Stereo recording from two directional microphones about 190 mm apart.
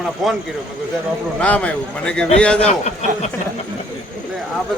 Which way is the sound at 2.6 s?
35° left (ahead or behind).